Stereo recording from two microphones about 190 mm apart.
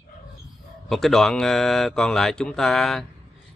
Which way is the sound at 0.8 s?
Centre (ahead or behind).